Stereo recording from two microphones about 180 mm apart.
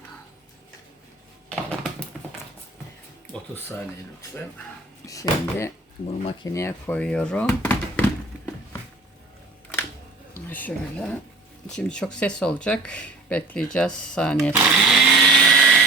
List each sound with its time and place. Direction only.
1.5 s typing: 5° left (ahead or behind)
5.0 s speech: 20° left (ahead or behind)
10.5 s speech: 10° left (ahead or behind)
14.5 s blender: 5° right (ahead or behind)